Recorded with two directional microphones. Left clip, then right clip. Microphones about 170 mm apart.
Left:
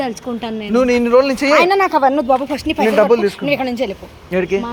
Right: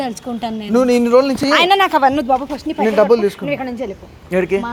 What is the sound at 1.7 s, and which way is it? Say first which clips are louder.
Speech: right 1 dB; 50° right (ahead or behind).